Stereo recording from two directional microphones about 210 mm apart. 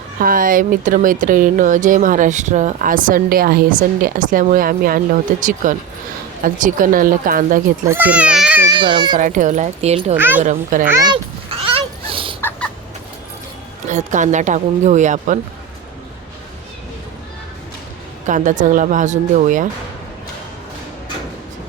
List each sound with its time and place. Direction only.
0.2 s speech: 40° right (ahead or behind)
7.9 s speech: 10° right (ahead or behind)
8.7 s a child's voice: 20° right (ahead or behind)
9.1 s speech: 40° right (ahead or behind)
10.2 s speech: 10° right (ahead or behind)
10.4 s speech: 35° right (ahead or behind)
10.8 s a sound: 15° right (ahead or behind)
12.4 s chicken: 10° left (ahead or behind)
13.8 s speech: 35° right (ahead or behind)
18.3 s speech: 35° right (ahead or behind)